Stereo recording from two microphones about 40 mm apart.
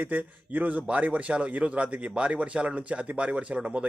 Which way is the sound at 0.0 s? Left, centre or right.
Right.